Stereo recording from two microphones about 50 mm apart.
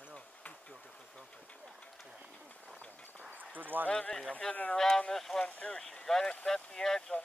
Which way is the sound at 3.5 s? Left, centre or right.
Right.